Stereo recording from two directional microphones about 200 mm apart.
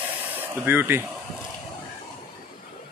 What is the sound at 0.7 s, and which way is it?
Speech, 10° right (ahead or behind).